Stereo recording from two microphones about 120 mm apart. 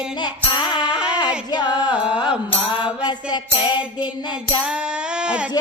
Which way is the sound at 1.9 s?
10° right (ahead or behind).